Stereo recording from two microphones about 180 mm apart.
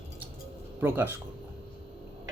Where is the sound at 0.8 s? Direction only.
10° right (ahead or behind).